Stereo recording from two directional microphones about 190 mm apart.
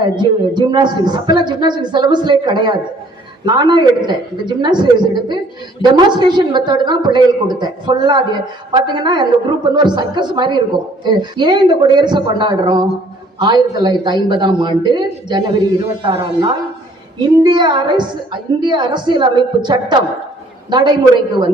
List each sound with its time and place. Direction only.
0.0 s a woman's voice: 25° right (ahead or behind)